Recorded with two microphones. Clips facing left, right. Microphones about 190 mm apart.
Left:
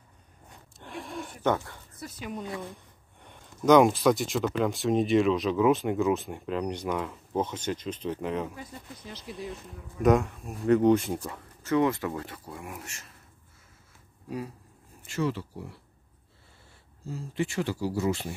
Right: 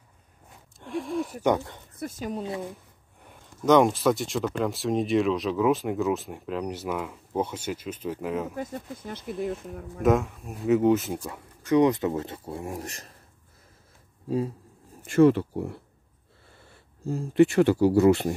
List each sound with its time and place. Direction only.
0.5 s a sound: centre (ahead or behind)
1.4 s speech: 15° right (ahead or behind)
2.0 s speech: 45° right (ahead or behind); by 2.6 s 30° right (ahead or behind)
3.2 s speech: 5° right (ahead or behind)
8.5 s speech: 50° right (ahead or behind)
10.0 s speech: centre (ahead or behind)
11.6 s speech: 20° right (ahead or behind); by 13.2 s 35° right (ahead or behind)
14.3 s speech: 30° right (ahead or behind)
15.0 s speech: 55° right (ahead or behind)
17.0 s speech: 50° right (ahead or behind)